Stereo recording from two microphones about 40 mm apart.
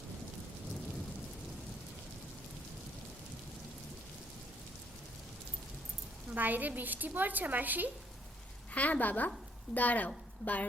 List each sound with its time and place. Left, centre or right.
6.3 s a woman's voice: right
8.7 s a woman's voice: left